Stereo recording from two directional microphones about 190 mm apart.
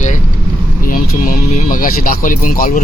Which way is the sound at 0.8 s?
45° left (ahead or behind).